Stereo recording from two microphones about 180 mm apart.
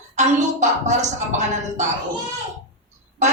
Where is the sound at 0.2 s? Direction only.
40° right (ahead or behind).